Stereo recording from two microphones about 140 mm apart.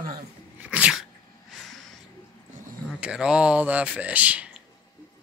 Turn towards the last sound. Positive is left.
turn(degrees=-10)  # may be behind; listen again after turning